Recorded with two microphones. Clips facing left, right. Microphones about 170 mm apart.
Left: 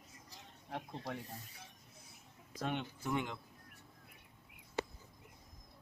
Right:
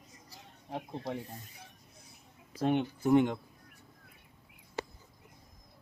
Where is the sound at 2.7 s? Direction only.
40° right (ahead or behind).